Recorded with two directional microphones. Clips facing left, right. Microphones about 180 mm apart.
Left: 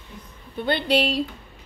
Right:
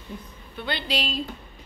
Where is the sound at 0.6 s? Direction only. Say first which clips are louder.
Left 8 dB; 55° left (ahead or behind).